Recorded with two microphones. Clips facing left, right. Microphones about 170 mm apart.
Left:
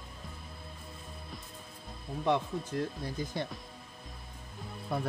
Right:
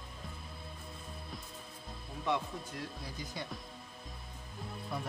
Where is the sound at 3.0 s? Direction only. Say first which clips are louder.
Left 7 dB; 50° left (ahead or behind).